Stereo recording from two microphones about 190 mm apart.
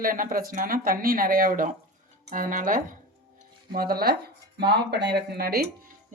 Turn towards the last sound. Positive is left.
turn(degrees=-55)  # may be behind; listen again after turning